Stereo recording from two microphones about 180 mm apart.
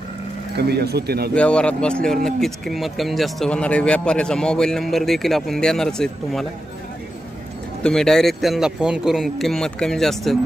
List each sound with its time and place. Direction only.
0.6 s speech: 65° right (ahead or behind)
1.3 s speech: 5° left (ahead or behind)
7.8 s speech: 5° left (ahead or behind)